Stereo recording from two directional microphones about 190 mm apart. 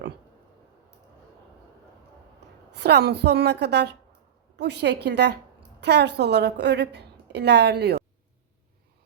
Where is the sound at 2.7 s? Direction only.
60° right (ahead or behind).